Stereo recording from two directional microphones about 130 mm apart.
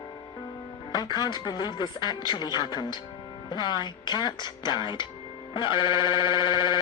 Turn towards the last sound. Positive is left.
turn(degrees=35)  # may be behind; listen again after turning